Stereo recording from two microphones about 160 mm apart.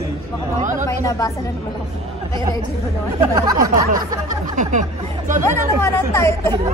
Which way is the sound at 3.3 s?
20° right (ahead or behind).